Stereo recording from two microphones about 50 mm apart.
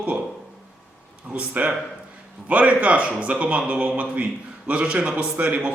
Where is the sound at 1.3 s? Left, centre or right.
Right.